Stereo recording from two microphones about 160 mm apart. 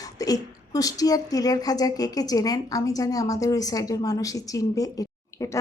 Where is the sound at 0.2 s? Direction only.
20° left (ahead or behind).